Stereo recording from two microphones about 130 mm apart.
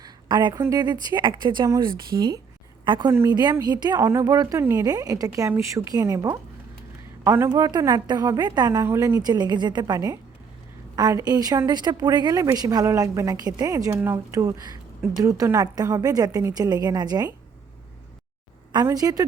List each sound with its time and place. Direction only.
0.0 s a sound: 35° right (ahead or behind)
0.6 s a woman's voice: 30° right (ahead or behind)
3.1 s a woman's voice: 20° right (ahead or behind)
7.5 s a woman's voice: 30° right (ahead or behind)
18.9 s a woman's voice: 30° right (ahead or behind)